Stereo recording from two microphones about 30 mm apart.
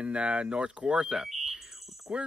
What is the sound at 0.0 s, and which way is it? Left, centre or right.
Speech, right.